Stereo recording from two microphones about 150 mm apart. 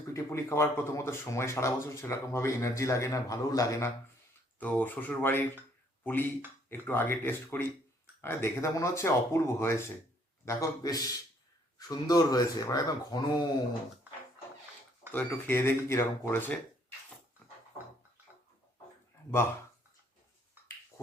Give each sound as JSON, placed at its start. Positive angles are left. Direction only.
{"t": 0.1, "sound": "speech", "side_deg": 20}
{"t": 4.6, "sound": "speech", "side_deg": 10}
{"t": 6.7, "sound": "speech", "side_deg": 15}
{"t": 15.1, "sound": "speech", "side_deg": 15}